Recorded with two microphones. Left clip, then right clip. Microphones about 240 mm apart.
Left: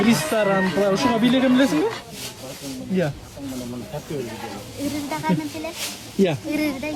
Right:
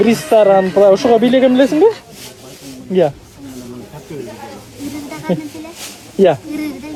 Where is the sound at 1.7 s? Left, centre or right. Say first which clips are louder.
Right 11 dB; centre.